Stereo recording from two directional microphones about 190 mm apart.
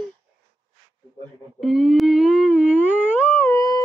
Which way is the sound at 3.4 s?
20° left (ahead or behind).